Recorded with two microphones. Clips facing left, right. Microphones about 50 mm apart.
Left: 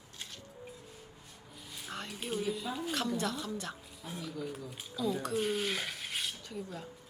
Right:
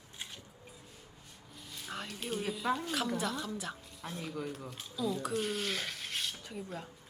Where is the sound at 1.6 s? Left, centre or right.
Centre.